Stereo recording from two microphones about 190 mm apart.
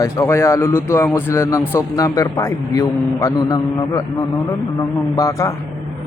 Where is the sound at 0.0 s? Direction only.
15° left (ahead or behind).